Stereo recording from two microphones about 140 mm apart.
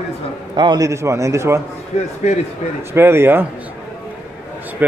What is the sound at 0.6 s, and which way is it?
A man's voice, 30° right (ahead or behind).